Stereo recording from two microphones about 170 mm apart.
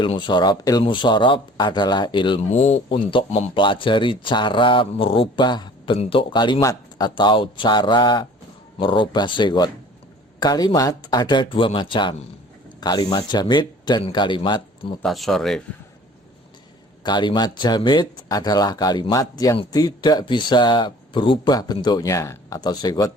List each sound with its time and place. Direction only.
0.0 s speech: 25° left (ahead or behind)
2.5 s speech: 40° left (ahead or behind)
15.0 s speech: centre (ahead or behind)
17.0 s speech: 25° left (ahead or behind)